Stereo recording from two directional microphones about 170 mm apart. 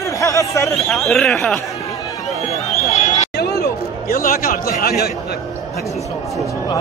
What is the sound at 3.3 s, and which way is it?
Chatter, 70° left (ahead or behind).